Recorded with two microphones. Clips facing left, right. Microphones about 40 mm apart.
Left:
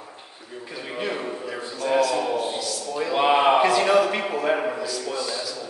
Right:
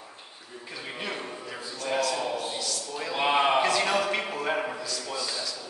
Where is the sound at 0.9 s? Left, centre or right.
Centre.